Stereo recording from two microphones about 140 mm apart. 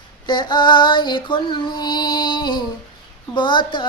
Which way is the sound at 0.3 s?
35° left (ahead or behind).